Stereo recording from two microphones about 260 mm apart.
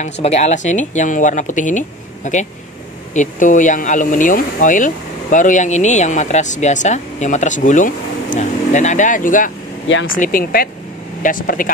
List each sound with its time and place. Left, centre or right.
0.0 s speech: left
9.8 s speech: left
10.1 s speech: left